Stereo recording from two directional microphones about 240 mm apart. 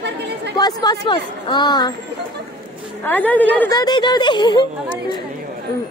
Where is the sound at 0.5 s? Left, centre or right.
Centre.